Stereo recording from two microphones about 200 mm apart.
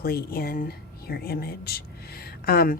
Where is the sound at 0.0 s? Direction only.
50° left (ahead or behind).